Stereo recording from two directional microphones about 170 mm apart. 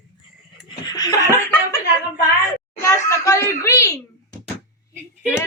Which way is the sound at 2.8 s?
15° left (ahead or behind).